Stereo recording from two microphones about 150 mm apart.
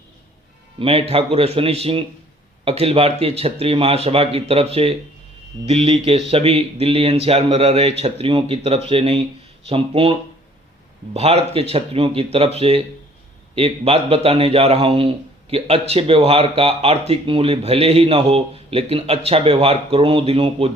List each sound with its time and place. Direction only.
0.8 s a man's voice: 40° right (ahead or behind)